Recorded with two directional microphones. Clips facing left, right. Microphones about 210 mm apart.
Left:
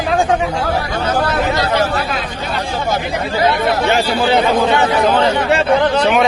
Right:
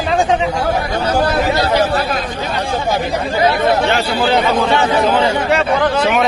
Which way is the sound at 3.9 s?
15° left (ahead or behind).